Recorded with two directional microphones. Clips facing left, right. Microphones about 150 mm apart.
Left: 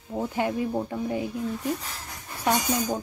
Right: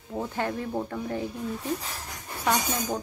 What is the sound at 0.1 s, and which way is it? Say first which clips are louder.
Speech: left 3 dB; 10° left (ahead or behind).